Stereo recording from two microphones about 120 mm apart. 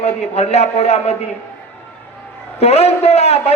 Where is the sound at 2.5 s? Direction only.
60° left (ahead or behind).